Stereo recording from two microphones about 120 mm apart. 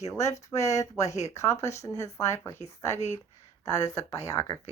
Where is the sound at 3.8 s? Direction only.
30° left (ahead or behind).